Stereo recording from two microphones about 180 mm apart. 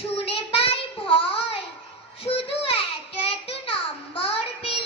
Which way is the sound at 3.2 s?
30° left (ahead or behind).